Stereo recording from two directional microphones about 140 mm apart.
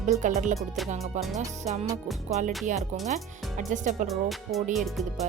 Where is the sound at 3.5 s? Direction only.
65° right (ahead or behind).